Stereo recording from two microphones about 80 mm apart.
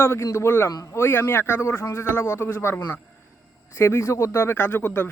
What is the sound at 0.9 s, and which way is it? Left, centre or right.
Speech, left.